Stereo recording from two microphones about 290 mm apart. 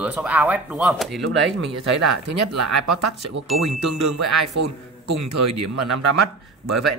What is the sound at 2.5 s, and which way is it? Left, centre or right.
Speech, right.